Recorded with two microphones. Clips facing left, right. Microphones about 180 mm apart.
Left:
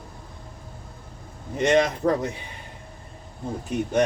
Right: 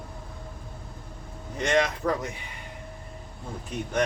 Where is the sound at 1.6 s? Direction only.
30° left (ahead or behind).